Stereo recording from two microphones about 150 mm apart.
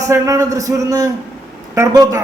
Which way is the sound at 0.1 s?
20° right (ahead or behind).